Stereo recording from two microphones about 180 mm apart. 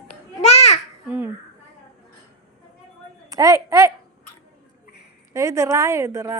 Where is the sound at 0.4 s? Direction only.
35° left (ahead or behind).